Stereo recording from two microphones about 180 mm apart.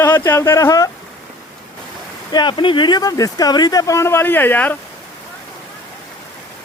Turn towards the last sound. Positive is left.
turn(degrees=10)  # may be behind; listen again after turning